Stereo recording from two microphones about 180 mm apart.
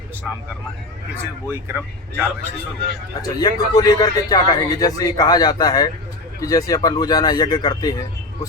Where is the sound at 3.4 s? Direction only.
20° left (ahead or behind).